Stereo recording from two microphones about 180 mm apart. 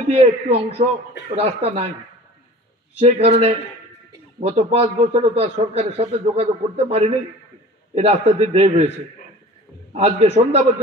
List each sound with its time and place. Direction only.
0.1 s a man's voice: 35° right (ahead or behind)
3.0 s a man's voice: 35° right (ahead or behind)
9.9 s a man's voice: 35° right (ahead or behind)